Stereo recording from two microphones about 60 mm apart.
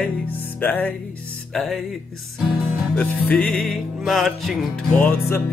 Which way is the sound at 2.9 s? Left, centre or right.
Left.